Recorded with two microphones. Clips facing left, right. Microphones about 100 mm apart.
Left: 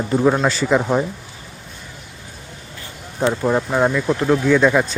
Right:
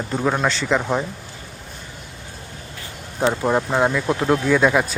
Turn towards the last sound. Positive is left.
turn(degrees=-10)  # may be behind; listen again after turning